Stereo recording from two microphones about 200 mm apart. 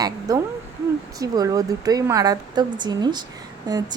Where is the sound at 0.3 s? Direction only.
20° right (ahead or behind).